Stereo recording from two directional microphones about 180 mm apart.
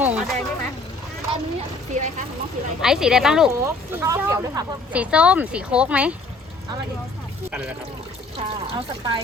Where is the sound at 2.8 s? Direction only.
5° right (ahead or behind).